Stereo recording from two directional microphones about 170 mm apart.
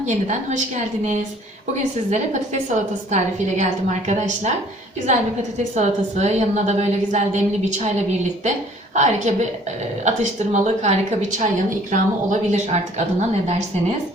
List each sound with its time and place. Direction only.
2.0 s a woman's voice: 45° right (ahead or behind)
5.7 s a woman's voice: 40° right (ahead or behind)